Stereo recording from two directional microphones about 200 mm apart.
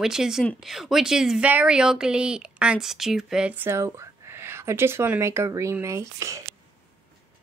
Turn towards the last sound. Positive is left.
turn(degrees=-15)  # may be behind; listen again after turning